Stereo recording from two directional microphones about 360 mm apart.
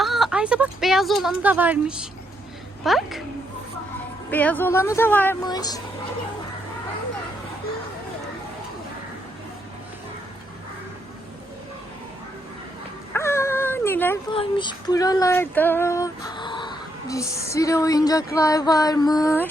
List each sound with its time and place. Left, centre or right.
0.0 s speech: centre
4.3 s speech: centre
13.1 s speech: centre